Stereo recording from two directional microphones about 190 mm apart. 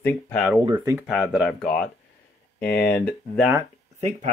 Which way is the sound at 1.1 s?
5° right (ahead or behind).